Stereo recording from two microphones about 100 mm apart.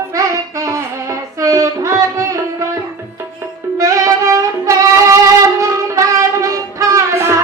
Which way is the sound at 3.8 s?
35° right (ahead or behind).